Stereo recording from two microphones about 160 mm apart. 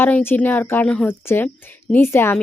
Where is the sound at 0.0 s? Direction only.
15° left (ahead or behind).